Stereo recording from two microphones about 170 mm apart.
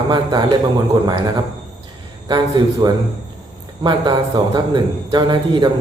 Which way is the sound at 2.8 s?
25° right (ahead or behind).